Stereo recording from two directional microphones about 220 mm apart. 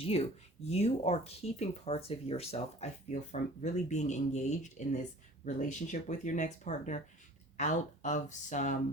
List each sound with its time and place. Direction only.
0.0 s speech: 25° left (ahead or behind)